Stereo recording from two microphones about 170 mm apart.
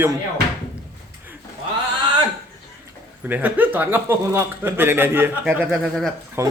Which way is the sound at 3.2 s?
10° right (ahead or behind).